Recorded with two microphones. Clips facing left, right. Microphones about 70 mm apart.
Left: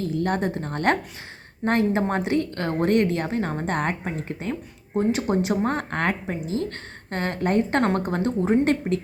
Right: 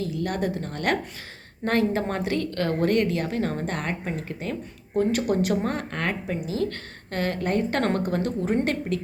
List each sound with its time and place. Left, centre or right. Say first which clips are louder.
0.0 s a woman's voice: left 3 dB; left
5.7 s a woman's voice: left 3 dB; left